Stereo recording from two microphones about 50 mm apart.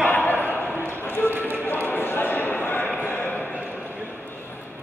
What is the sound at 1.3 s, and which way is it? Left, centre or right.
Run, right.